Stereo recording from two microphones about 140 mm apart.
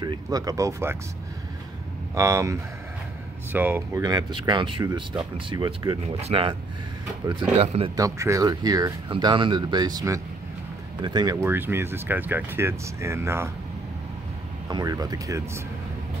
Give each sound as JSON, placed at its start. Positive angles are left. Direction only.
{"t": 0.0, "sound": "speech", "side_deg": -30}
{"t": 2.1, "sound": "speech", "side_deg": -20}
{"t": 4.0, "sound": "speech", "side_deg": -30}
{"t": 7.5, "sound": "speech", "side_deg": -45}
{"t": 7.9, "sound": "speech", "side_deg": -25}
{"t": 11.4, "sound": "speech", "side_deg": -15}
{"t": 14.7, "sound": "speech", "side_deg": -30}